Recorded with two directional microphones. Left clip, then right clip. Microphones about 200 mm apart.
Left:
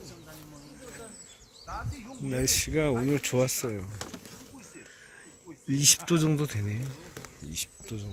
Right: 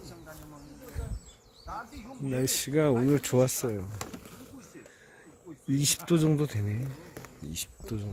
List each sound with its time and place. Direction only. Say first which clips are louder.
2.4 s speech: even; 15° right (ahead or behind)
5.7 s speech: left 3 dB; 5° right (ahead or behind)
7.5 s speech: left 1 dB; 30° right (ahead or behind)